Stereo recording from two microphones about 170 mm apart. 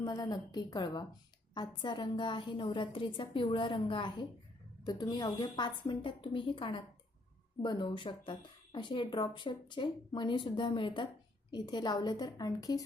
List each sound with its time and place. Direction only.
0.0 s speech: 25° left (ahead or behind)